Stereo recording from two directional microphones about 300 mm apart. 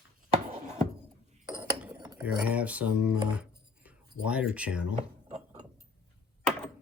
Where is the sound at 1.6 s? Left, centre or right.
Centre.